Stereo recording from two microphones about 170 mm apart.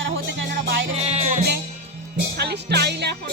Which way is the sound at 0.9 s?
40° right (ahead or behind).